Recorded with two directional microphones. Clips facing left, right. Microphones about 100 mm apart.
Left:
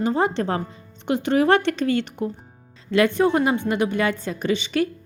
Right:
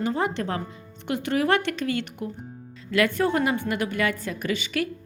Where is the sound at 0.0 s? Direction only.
30° left (ahead or behind).